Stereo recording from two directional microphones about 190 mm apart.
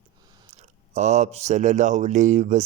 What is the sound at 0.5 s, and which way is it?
Speech, 35° right (ahead or behind).